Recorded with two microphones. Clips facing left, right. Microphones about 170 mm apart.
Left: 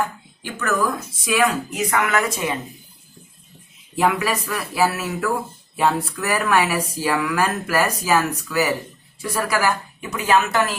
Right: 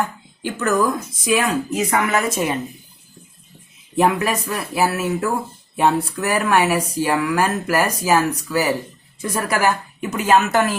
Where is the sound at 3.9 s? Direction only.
20° right (ahead or behind).